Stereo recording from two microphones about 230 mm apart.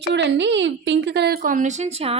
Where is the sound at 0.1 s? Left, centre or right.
Right.